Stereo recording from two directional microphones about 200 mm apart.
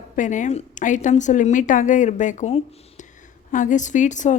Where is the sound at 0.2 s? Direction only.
40° left (ahead or behind).